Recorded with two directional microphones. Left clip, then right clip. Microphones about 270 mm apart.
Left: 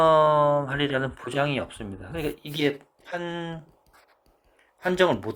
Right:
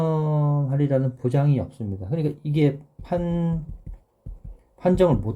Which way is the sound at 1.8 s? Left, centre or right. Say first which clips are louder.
Right 3 dB; left.